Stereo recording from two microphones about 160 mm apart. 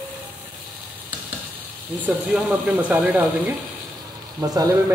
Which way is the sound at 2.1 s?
5° right (ahead or behind).